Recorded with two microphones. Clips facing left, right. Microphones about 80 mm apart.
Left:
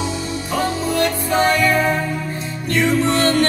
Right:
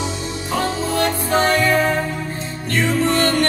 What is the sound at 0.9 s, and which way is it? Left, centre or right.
Music, right.